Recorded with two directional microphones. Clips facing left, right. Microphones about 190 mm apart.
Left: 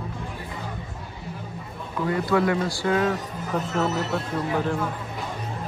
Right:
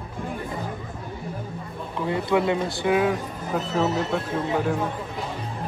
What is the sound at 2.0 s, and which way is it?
Speech, 20° right (ahead or behind).